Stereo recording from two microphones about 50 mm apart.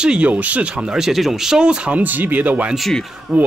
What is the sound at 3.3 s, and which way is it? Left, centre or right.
Speech, centre.